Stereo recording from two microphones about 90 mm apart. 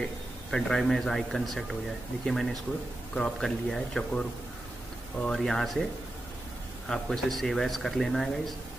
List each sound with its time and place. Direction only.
0.5 s speech: 5° left (ahead or behind)
5.2 s speech: 5° left (ahead or behind)
6.9 s speech: centre (ahead or behind)